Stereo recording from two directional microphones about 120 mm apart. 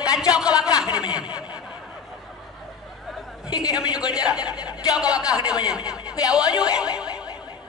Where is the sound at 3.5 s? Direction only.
35° left (ahead or behind).